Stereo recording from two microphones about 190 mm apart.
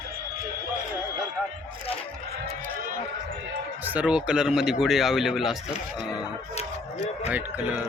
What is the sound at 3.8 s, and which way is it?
Speech, 5° right (ahead or behind).